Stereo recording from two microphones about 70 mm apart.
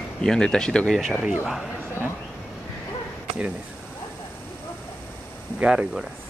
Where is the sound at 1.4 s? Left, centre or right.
Centre.